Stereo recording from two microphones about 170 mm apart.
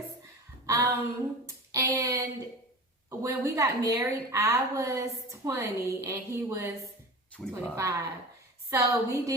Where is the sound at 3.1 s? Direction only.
20° right (ahead or behind).